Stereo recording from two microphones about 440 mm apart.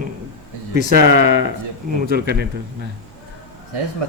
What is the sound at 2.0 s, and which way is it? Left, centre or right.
Speech, right.